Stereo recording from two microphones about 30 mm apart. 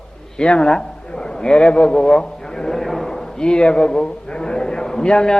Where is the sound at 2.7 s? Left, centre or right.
Centre.